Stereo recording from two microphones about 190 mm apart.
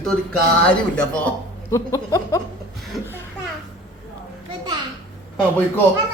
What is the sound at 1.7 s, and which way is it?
Speech, 15° left (ahead or behind).